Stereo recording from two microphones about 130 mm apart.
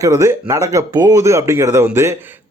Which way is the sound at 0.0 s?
25° right (ahead or behind).